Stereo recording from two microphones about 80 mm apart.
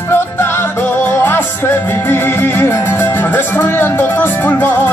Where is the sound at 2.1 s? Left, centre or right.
Left.